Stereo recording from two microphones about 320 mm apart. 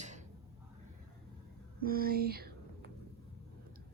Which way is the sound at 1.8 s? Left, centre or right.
Right.